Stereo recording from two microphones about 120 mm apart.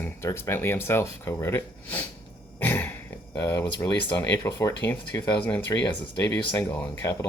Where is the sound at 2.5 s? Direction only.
15° left (ahead or behind).